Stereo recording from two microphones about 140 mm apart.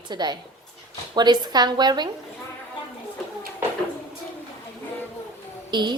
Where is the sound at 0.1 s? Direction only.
30° right (ahead or behind).